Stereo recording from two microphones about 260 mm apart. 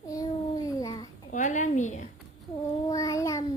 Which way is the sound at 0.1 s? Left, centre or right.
Centre.